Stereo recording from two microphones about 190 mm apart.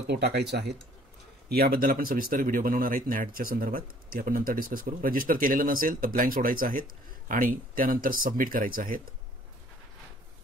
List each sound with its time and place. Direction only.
0.1 s speech: 60° right (ahead or behind)